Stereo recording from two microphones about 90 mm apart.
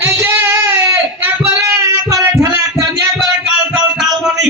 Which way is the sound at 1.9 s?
35° right (ahead or behind).